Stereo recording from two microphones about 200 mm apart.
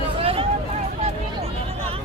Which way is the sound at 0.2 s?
30° right (ahead or behind).